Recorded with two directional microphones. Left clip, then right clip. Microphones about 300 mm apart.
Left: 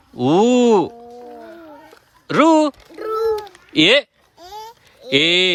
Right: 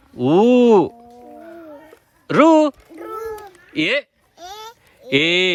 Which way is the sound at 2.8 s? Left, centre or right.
Left.